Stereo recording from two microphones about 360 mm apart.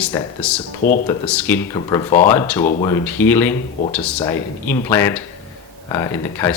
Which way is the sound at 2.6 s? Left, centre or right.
Centre.